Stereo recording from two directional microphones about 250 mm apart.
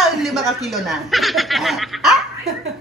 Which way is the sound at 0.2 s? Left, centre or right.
Centre.